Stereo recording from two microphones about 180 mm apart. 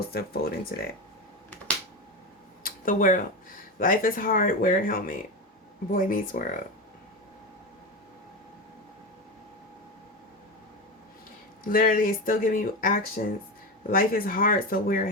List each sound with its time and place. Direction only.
0.1 s speech: 60° left (ahead or behind)
2.6 s a sound: 50° left (ahead or behind)
3.8 s speech: 50° left (ahead or behind)
11.7 s speech: 50° left (ahead or behind)